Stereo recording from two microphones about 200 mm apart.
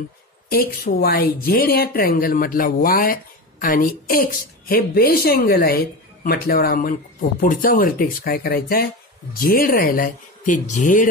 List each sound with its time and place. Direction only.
0.5 s speech: 50° left (ahead or behind)